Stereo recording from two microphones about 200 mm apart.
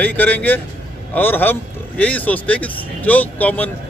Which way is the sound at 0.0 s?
10° left (ahead or behind).